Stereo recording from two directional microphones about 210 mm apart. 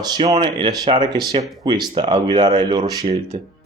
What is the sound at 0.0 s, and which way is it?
Speech, 20° right (ahead or behind).